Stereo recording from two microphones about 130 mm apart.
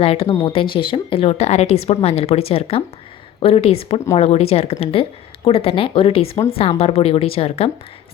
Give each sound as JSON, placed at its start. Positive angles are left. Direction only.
{"t": 0.0, "sound": "a woman's voice", "side_deg": 50}